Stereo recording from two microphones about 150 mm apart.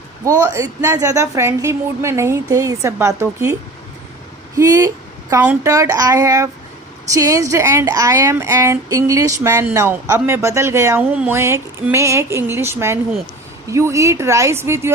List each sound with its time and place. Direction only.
0.3 s a woman's voice: 20° right (ahead or behind)
4.5 s a woman's voice: 20° right (ahead or behind)